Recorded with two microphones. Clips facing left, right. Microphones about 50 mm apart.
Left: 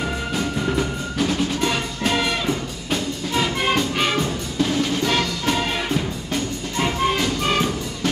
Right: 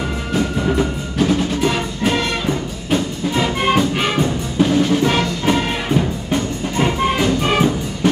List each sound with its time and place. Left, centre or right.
0.3 s music: centre
4.2 s music: right